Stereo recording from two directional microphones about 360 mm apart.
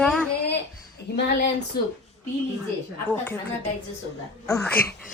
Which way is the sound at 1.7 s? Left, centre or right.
Left.